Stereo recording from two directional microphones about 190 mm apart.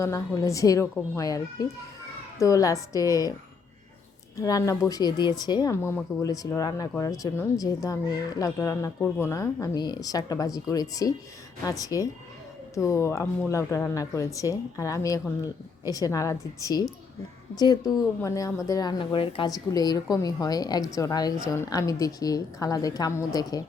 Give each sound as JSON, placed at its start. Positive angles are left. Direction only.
{"t": 0.0, "sound": "speech", "side_deg": 15}
{"t": 4.4, "sound": "a woman's voice", "side_deg": 15}